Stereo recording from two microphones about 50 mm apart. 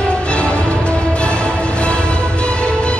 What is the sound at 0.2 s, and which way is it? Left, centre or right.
Music, left.